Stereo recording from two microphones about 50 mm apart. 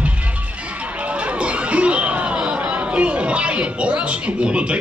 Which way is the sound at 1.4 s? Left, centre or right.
Right.